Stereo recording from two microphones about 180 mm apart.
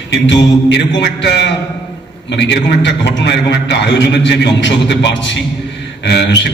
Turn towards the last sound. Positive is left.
turn(degrees=70)  # may be behind; listen again after turning